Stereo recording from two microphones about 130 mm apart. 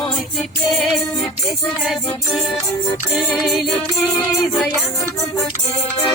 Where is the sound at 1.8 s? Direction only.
Centre (ahead or behind).